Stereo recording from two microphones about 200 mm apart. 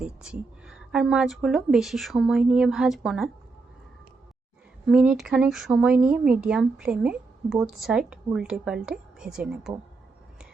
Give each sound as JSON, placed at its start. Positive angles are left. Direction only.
{"t": 0.0, "sound": "speech", "side_deg": -5}
{"t": 4.9, "sound": "speech", "side_deg": -5}